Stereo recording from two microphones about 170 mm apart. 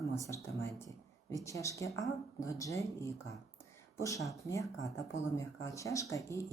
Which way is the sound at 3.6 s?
20° left (ahead or behind).